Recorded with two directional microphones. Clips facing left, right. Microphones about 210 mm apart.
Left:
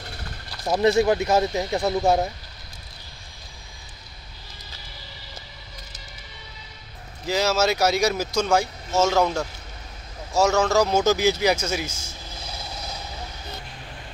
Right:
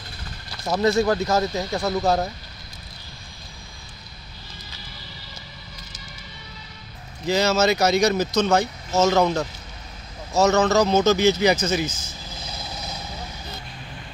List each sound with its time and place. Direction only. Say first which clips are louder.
0.7 s speech: left 1 dB; 15° left (ahead or behind)
7.2 s speech: right 2 dB; 5° left (ahead or behind)
9.1 s speech: right 2 dB; 5° right (ahead or behind)
10.3 s speech: right 2 dB; 10° left (ahead or behind)